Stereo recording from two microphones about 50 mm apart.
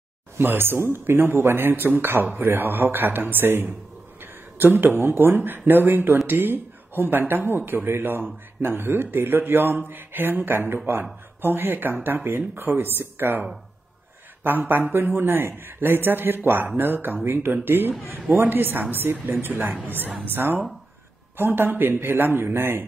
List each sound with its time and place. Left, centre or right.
0.4 s speech: right
14.4 s speech: right